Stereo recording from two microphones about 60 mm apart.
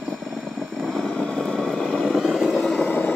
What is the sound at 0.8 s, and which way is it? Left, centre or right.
Vehicle, centre.